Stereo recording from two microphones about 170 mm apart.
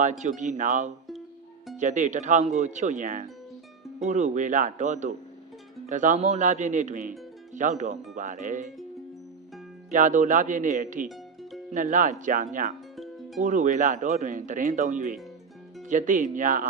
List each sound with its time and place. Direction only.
0.0 s speech: 45° right (ahead or behind)
9.9 s speech: 50° right (ahead or behind)
13.0 s music: centre (ahead or behind)
13.4 s speech: 45° right (ahead or behind)